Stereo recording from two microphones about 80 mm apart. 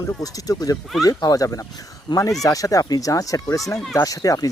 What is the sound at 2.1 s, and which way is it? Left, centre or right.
Speech, left.